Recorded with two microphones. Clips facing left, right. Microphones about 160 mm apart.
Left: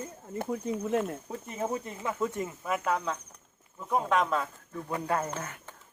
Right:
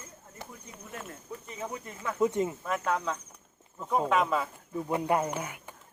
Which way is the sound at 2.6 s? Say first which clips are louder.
Even; 5° left (ahead or behind).